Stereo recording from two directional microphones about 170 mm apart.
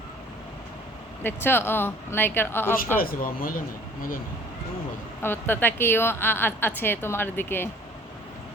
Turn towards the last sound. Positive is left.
turn(degrees=15)  # may be behind; listen again after turning